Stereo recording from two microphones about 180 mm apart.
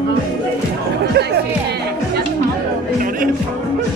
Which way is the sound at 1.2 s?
65° right (ahead or behind).